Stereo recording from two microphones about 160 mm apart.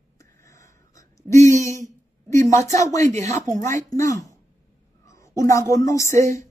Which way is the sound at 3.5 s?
20° left (ahead or behind).